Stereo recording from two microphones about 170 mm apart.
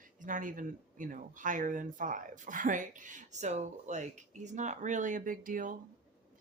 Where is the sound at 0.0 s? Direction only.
50° right (ahead or behind).